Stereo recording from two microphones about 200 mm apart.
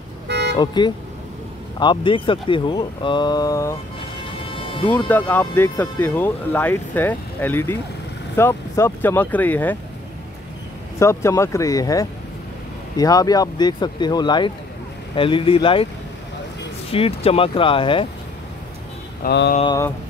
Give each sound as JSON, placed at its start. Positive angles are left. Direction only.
{"t": 0.3, "sound": "vehicle", "side_deg": -60}
{"t": 0.6, "sound": "speech", "side_deg": 20}
{"t": 4.8, "sound": "speech", "side_deg": 10}
{"t": 11.0, "sound": "speech", "side_deg": 15}
{"t": 16.9, "sound": "speech", "side_deg": 30}
{"t": 19.2, "sound": "a sound", "side_deg": 55}
{"t": 19.6, "sound": "speech", "side_deg": 20}